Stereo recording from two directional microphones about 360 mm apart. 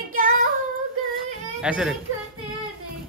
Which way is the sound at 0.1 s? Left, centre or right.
Right.